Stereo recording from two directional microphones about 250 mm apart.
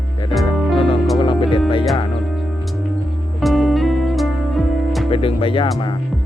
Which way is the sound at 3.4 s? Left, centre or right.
Centre.